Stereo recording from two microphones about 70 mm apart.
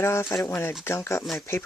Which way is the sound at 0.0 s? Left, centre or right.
Left.